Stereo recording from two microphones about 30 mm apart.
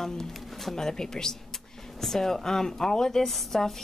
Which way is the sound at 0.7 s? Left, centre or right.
Centre.